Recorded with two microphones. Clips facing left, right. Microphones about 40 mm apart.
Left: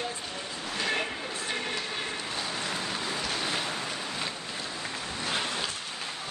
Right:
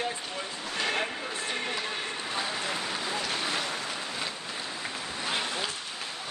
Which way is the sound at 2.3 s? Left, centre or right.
Centre.